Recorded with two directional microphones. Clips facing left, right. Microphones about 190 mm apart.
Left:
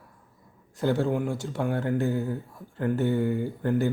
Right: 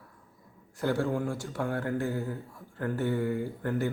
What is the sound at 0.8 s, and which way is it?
A man's voice, 25° left (ahead or behind).